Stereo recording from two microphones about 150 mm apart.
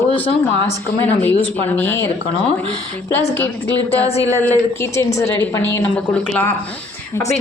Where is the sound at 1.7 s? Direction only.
15° left (ahead or behind).